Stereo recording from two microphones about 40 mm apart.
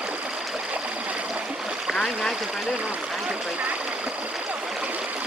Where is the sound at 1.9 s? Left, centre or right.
Centre.